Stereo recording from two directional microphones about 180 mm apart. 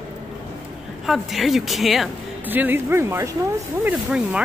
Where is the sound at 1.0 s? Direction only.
Centre (ahead or behind).